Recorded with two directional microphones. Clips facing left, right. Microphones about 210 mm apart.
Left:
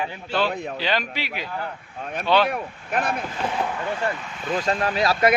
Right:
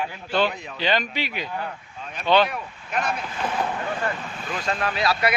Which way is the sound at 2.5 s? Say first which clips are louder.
Left 4 dB; 55° left (ahead or behind).